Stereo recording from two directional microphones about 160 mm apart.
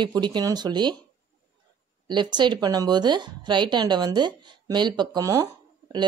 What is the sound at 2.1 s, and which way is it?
Speech, 30° right (ahead or behind).